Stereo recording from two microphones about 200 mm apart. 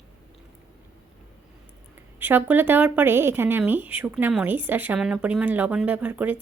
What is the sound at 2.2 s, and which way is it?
A woman's voice, 10° right (ahead or behind).